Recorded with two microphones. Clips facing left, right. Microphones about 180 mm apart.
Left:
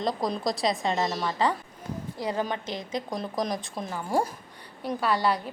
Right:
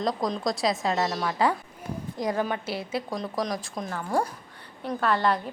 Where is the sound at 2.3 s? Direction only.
15° left (ahead or behind).